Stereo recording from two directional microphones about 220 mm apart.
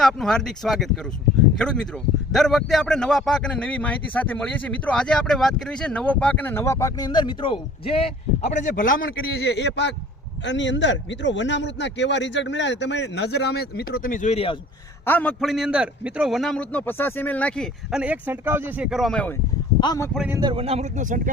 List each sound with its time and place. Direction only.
0.0 s a man's voice: centre (ahead or behind); by 14.6 s 25° left (ahead or behind)
15.0 s a man's voice: 5° left (ahead or behind)
19.8 s a man's voice: 15° left (ahead or behind)
20.1 s a man's voice: 5° right (ahead or behind)
20.4 s speech: 25° right (ahead or behind)